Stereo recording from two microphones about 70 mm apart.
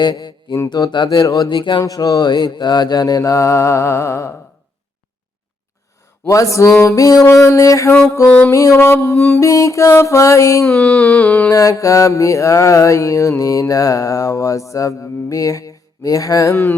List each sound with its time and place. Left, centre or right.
0.0 s mantra: left
0.7 s speech: left
1.8 s mantra: left
6.2 s mantra: left
8.7 s music: left
9.3 s mantra: left
10.8 s a sound: centre
11.5 s mantra: left
15.3 s a sound: left